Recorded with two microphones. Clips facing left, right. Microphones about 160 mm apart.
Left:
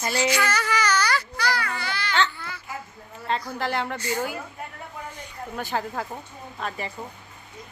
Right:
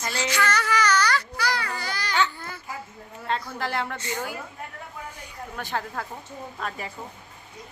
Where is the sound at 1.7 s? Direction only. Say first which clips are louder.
Left 1 dB; 40° right (ahead or behind).